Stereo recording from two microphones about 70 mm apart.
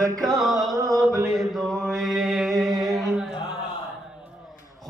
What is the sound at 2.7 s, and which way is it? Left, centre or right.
Humming, right.